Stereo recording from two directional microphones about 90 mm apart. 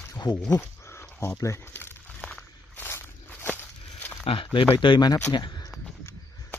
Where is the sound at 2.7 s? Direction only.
25° left (ahead or behind).